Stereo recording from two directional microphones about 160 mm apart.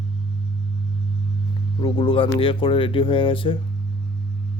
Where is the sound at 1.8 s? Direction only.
35° left (ahead or behind).